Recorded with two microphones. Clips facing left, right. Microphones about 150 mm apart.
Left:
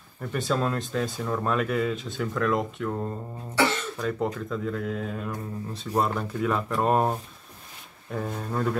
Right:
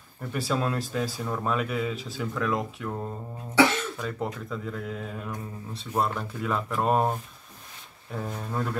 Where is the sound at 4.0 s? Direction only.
Centre (ahead or behind).